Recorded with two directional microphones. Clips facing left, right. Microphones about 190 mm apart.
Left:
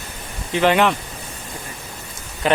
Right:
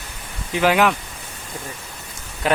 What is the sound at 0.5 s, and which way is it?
Speech, 5° right (ahead or behind).